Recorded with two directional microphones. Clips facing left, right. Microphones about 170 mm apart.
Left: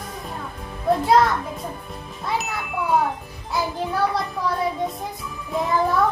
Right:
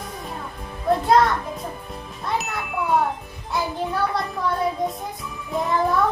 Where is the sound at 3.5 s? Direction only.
Centre (ahead or behind).